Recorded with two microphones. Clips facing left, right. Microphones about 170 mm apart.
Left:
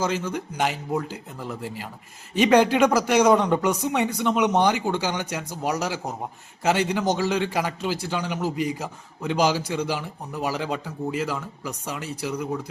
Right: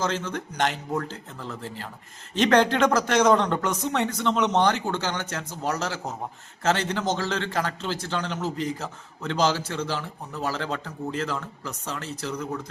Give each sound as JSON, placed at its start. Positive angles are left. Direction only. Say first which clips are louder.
{"t": 0.0, "sound": "a man's voice", "louder": "left 2 dB", "side_deg": 10}